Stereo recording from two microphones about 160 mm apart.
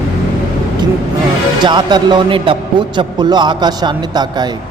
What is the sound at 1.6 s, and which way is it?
A man's voice, 25° right (ahead or behind).